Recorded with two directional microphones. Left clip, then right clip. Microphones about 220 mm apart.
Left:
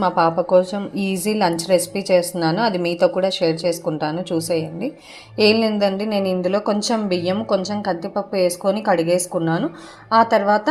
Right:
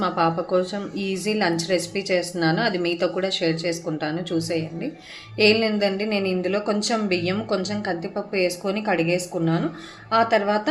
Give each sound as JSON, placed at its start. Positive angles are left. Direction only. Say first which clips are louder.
{"t": 0.0, "sound": "a woman's voice", "louder": "left 5 dB", "side_deg": 20}